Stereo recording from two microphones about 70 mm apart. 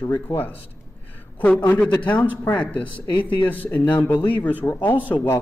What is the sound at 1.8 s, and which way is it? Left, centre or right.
A man's voice, centre.